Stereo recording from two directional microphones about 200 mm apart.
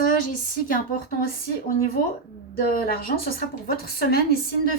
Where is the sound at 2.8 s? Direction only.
50° left (ahead or behind).